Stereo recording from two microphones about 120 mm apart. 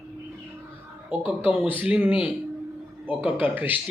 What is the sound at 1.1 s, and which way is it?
A man's voice, 10° right (ahead or behind).